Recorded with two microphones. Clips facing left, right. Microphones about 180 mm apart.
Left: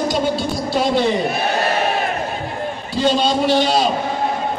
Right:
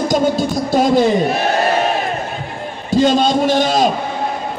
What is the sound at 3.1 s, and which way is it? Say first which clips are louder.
Music: right 2 dB; 45° right (ahead or behind).